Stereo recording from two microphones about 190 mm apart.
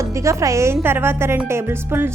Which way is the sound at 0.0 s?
15° right (ahead or behind).